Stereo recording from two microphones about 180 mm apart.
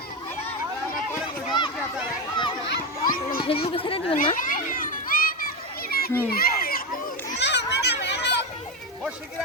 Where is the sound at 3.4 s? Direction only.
30° left (ahead or behind).